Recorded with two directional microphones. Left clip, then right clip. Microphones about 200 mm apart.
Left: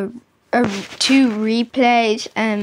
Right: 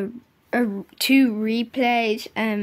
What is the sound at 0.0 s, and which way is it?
A woman's voice, 5° left (ahead or behind).